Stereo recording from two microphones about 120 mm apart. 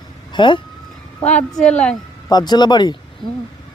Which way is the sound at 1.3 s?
10° left (ahead or behind).